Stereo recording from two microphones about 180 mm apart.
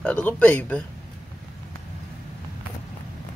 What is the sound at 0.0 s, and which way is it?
Speech, 5° left (ahead or behind).